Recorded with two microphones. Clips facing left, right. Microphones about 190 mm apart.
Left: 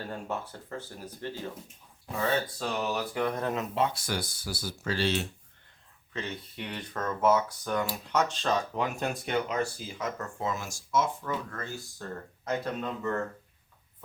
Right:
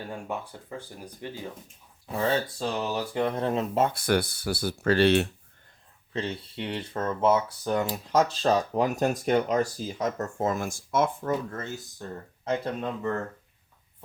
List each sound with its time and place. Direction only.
0.0 s speech: 15° right (ahead or behind)
2.6 s speech: 25° right (ahead or behind)
3.8 s speech: 55° right (ahead or behind)
6.1 s speech: 30° right (ahead or behind); by 11.3 s 55° right (ahead or behind)
11.5 s speech: 20° right (ahead or behind)